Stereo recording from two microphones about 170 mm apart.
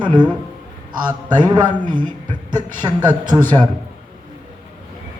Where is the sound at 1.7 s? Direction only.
50° right (ahead or behind).